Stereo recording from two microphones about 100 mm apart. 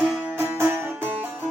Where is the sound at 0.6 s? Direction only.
20° right (ahead or behind).